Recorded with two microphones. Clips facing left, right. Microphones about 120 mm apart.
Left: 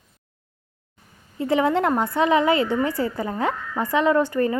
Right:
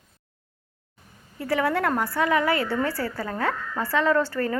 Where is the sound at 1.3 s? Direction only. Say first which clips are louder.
Left 4 dB; 20° left (ahead or behind).